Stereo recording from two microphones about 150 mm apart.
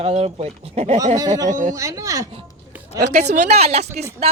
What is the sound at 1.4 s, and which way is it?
Speech, 55° right (ahead or behind).